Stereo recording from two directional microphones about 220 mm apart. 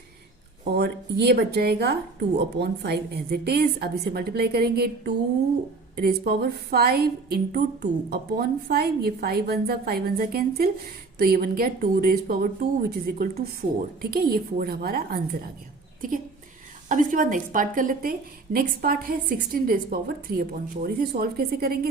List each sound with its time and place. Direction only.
0.6 s a woman's voice: 45° right (ahead or behind)